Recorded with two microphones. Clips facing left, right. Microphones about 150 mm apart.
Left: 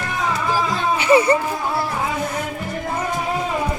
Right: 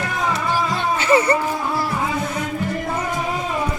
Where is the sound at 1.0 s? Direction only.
15° left (ahead or behind).